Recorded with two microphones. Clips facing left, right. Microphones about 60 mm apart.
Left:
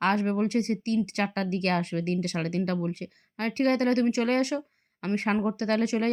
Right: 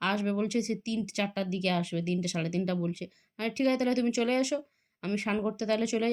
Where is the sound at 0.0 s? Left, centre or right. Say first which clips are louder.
Left 4 dB; left.